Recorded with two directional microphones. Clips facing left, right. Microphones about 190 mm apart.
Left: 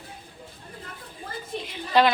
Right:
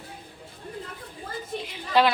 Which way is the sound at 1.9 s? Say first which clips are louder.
Left 1 dB; 5° right (ahead or behind).